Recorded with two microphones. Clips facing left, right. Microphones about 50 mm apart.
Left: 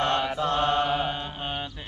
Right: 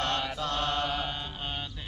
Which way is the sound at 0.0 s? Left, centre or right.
Centre.